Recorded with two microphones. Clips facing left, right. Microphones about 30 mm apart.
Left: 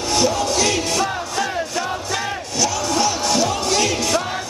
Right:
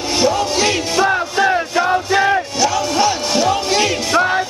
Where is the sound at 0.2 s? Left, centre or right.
Right.